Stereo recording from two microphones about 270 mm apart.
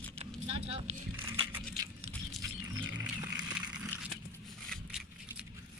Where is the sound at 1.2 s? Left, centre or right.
Centre.